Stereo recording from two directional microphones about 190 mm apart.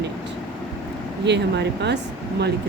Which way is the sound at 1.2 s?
65° right (ahead or behind).